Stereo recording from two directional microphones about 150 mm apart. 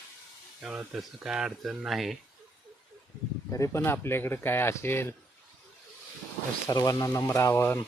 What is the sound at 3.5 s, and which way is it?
Speech, 20° left (ahead or behind).